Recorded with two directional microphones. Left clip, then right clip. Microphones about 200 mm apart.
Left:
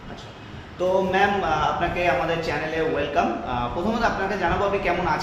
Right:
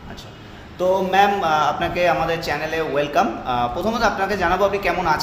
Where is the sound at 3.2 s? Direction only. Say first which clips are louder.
Right 4 dB; 60° right (ahead or behind).